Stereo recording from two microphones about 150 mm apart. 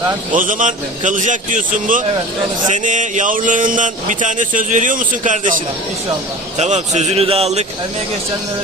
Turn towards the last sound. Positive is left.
turn(degrees=-45)  # may be behind; listen again after turning